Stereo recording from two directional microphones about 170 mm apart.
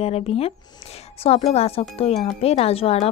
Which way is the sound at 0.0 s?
35° left (ahead or behind).